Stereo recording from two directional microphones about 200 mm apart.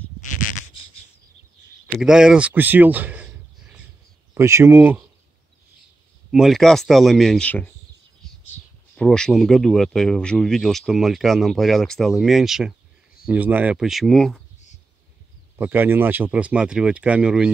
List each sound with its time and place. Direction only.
0.2 s a sound: 40° left (ahead or behind)
1.9 s speech: 5° right (ahead or behind)
4.3 s speech: 15° right (ahead or behind)
6.3 s speech: centre (ahead or behind)
8.9 s speech: 5° left (ahead or behind)
15.5 s speech: 10° right (ahead or behind)